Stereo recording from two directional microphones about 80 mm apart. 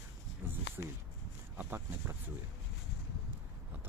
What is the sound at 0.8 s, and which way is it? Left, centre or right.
Speech, right.